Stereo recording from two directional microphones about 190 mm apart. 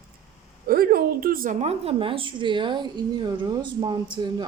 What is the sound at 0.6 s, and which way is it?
A woman's voice, 50° right (ahead or behind).